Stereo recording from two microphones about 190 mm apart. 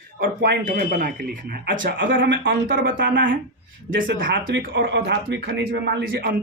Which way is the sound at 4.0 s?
50° right (ahead or behind).